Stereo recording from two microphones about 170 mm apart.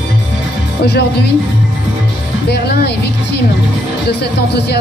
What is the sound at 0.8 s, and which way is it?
Speech, 75° left (ahead or behind).